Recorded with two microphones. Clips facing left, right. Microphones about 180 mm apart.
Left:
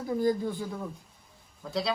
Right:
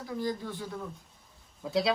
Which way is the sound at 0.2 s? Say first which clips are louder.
Left 6 dB; 50° left (ahead or behind).